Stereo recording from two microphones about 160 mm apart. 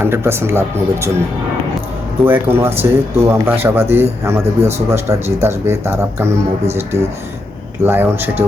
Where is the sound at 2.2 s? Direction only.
15° right (ahead or behind).